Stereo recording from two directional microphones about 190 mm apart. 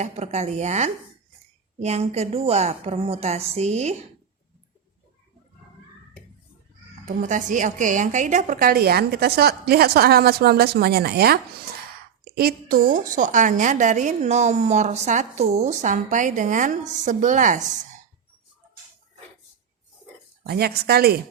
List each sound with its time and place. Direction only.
0.0 s a woman's voice: 35° right (ahead or behind)
7.2 s a woman's voice: 40° right (ahead or behind)
20.4 s a woman's voice: 55° right (ahead or behind)